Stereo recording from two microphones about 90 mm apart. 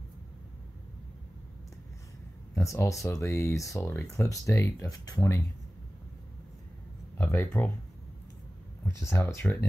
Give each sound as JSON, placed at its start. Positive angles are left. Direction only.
{"t": 2.5, "sound": "speech", "side_deg": 30}
{"t": 7.2, "sound": "speech", "side_deg": 25}
{"t": 8.8, "sound": "speech", "side_deg": 30}